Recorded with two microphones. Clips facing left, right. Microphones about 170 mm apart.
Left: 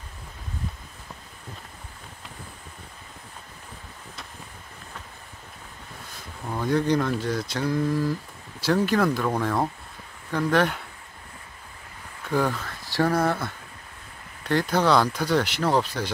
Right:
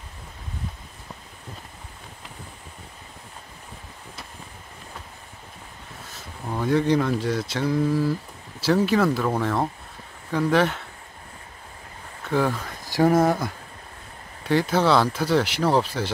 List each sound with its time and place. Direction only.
6.4 s speech: 5° right (ahead or behind)
12.3 s speech: centre (ahead or behind)
12.5 s speech: 20° right (ahead or behind)
14.4 s speech: 5° right (ahead or behind)